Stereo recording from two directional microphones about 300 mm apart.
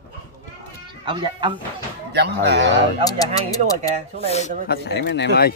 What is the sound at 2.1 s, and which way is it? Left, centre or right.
Speech, right.